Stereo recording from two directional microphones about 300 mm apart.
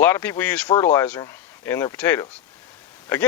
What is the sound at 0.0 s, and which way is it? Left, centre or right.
Speech, centre.